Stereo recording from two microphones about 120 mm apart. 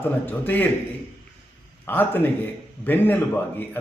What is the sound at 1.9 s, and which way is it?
A man's voice, 15° left (ahead or behind).